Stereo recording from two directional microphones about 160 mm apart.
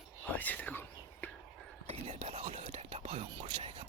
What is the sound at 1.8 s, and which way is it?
Whispering, 40° right (ahead or behind).